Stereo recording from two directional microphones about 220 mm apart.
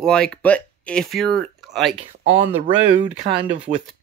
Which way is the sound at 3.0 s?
25° right (ahead or behind).